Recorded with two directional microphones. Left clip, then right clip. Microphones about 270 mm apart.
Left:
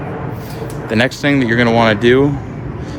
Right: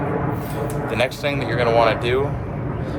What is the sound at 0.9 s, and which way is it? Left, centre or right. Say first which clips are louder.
Speech: left 8 dB; left.